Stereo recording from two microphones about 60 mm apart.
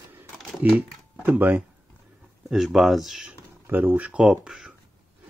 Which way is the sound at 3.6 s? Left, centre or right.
Right.